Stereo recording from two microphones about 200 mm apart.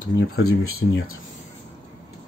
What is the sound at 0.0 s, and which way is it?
Speech, 80° left.